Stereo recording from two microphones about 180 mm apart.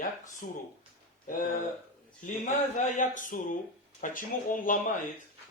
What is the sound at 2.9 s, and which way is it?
Speech, 45° left (ahead or behind).